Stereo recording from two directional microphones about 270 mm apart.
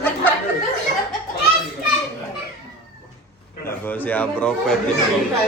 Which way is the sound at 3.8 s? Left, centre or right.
Centre.